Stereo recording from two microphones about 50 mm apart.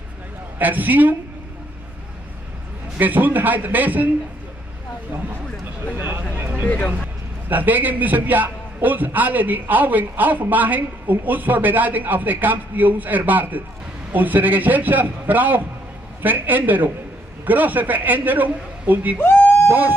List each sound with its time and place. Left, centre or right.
0.6 s a man's voice: right
3.0 s a man's voice: right
5.9 s speech: right
6.3 s a sound: right
7.4 s a man's voice: right